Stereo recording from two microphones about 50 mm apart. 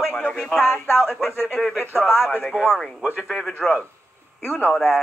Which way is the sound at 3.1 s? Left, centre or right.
Centre.